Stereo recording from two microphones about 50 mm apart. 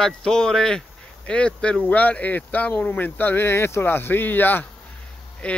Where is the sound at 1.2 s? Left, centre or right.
Left.